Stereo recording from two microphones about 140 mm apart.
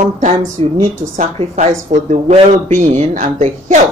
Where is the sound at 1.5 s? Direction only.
55° right (ahead or behind).